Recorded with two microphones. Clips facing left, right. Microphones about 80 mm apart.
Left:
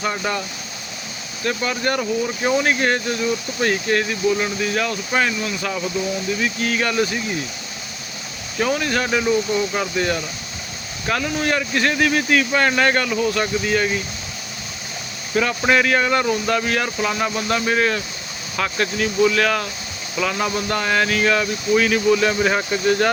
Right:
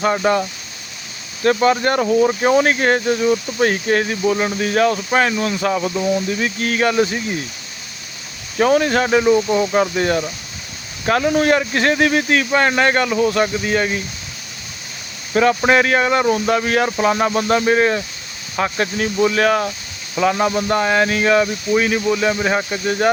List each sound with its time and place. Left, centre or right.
0.0 s speech: right
1.5 s speech: right
4.6 s speech: right
6.8 s speech: right
8.5 s speech: right
11.0 s speech: right
15.4 s speech: right; by 23.1 s centre